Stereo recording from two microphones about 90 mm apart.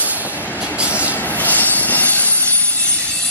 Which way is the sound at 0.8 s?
15° right (ahead or behind).